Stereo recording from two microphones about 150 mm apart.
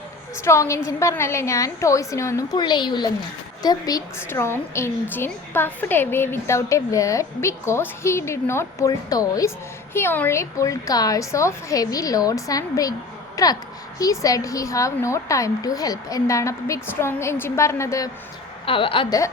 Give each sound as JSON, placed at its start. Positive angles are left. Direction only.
{"t": 0.4, "sound": "a woman's voice", "side_deg": 20}
{"t": 18.6, "sound": "a woman's voice", "side_deg": 35}